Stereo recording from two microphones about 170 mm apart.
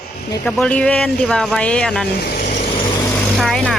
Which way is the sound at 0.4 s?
5° left (ahead or behind).